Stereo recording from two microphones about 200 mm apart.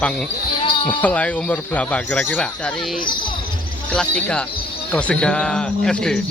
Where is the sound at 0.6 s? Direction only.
25° left (ahead or behind).